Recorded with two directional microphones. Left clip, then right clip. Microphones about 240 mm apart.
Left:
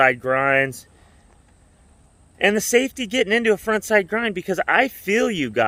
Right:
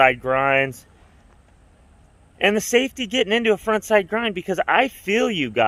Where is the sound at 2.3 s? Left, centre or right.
Centre.